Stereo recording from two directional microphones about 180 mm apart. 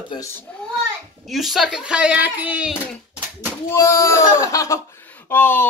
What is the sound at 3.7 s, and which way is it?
Speech, 15° left (ahead or behind).